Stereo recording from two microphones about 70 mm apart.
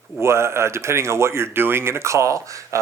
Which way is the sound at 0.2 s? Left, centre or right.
Right.